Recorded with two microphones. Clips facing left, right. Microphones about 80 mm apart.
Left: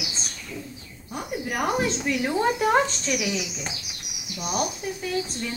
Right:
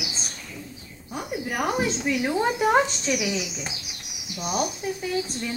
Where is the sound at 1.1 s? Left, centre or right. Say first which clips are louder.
Even; centre.